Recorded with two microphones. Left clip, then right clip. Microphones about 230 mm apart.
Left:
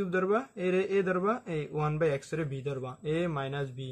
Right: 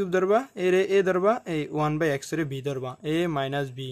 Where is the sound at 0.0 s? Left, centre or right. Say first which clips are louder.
Right 6 dB; right.